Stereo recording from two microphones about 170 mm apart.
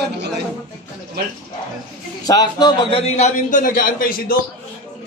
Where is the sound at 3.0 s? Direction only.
40° left (ahead or behind); by 4.3 s 55° left (ahead or behind).